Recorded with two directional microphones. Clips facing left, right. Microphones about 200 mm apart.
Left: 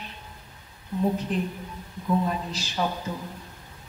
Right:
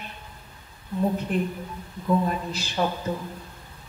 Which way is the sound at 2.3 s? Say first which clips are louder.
Right 1 dB; 55° right (ahead or behind).